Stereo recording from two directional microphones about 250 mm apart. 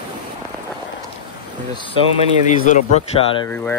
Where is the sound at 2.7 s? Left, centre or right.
Left.